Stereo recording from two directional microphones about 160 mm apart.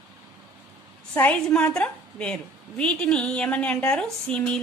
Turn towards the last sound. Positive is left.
turn(degrees=5)  # may be behind; listen again after turning